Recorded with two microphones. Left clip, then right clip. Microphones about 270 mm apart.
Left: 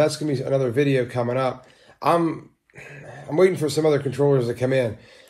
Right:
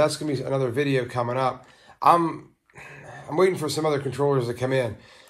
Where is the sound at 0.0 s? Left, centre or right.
Right.